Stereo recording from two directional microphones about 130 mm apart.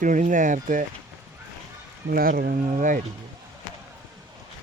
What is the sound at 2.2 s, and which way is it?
Speech, 90° right.